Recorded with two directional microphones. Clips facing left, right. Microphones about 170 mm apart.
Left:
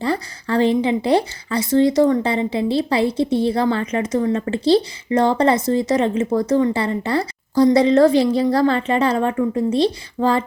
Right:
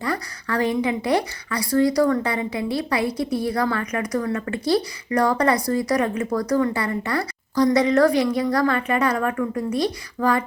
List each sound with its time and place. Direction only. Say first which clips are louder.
0.0 s a woman's voice: left 5 dB; 30° left (ahead or behind)